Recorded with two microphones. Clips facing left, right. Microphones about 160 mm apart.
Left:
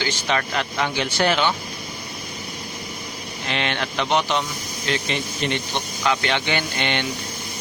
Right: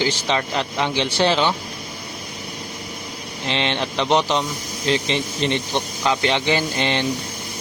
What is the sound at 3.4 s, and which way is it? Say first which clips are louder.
Speech: right 3 dB; 30° right (ahead or behind).